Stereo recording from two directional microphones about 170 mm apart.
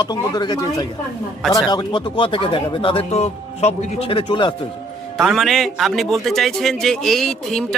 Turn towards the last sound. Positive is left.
turn(degrees=5)  # may be behind; listen again after turning